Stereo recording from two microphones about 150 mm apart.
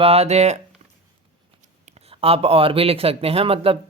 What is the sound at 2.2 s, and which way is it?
Speech, 40° right (ahead or behind).